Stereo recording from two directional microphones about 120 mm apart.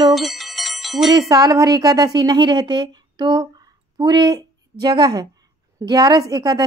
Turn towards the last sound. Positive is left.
turn(degrees=-30)  # may be behind; listen again after turning